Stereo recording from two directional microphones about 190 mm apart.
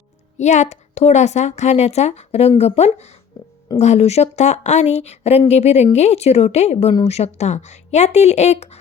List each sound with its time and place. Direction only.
0.3 s a woman's voice: 40° left (ahead or behind)